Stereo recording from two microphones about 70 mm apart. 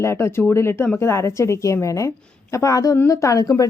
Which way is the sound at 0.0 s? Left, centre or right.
Left.